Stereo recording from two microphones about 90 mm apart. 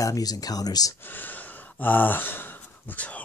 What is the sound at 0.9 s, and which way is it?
Speech, 20° left (ahead or behind).